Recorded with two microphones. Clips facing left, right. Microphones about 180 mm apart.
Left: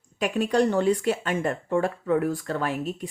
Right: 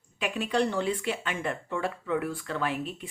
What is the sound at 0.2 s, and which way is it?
Speech, 45° left (ahead or behind).